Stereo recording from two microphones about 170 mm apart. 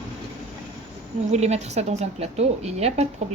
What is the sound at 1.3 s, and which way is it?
A woman's voice, 40° right (ahead or behind).